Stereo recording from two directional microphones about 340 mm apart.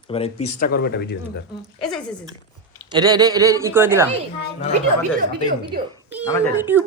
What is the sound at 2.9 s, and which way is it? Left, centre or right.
A man's voice, centre.